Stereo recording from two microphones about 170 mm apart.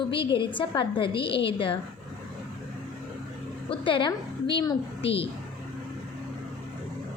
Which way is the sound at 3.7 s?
30° left (ahead or behind).